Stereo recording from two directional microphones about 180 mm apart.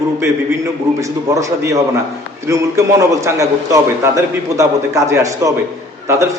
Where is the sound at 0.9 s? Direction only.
15° right (ahead or behind).